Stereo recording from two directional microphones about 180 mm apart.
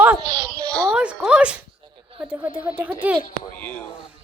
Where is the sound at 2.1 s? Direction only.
10° right (ahead or behind).